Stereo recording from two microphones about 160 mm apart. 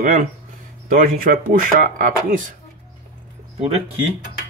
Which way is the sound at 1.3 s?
70° right (ahead or behind).